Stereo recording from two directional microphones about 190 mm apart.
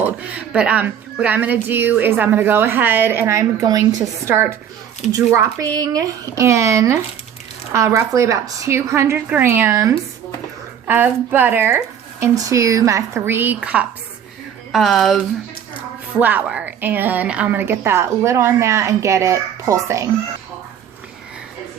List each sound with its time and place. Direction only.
0.0 s speech: 10° right (ahead or behind)